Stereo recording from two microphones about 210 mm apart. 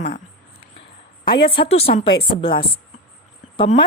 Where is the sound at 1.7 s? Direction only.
30° left (ahead or behind).